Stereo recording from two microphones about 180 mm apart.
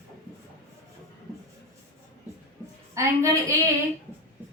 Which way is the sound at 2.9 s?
15° right (ahead or behind).